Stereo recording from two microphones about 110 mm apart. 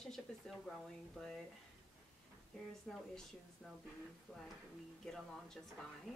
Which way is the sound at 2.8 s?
Centre (ahead or behind).